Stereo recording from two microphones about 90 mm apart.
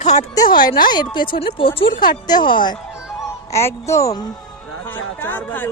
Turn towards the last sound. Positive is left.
turn(degrees=20)  # may be behind; listen again after turning